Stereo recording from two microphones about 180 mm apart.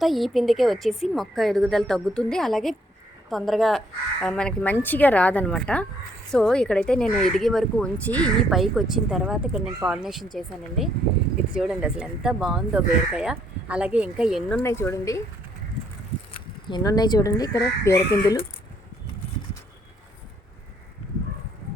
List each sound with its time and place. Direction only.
0.0 s a woman's voice: centre (ahead or behind)
11.6 s speech: 5° right (ahead or behind)
14.6 s a woman's voice: 15° left (ahead or behind)
16.3 s speech: 25° left (ahead or behind)